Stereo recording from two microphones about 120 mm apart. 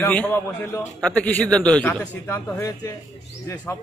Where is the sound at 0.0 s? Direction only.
15° left (ahead or behind).